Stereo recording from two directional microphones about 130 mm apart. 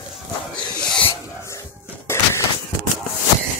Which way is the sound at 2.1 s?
20° left (ahead or behind).